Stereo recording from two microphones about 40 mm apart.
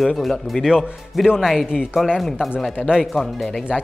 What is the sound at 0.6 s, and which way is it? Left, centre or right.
A man's voice, centre.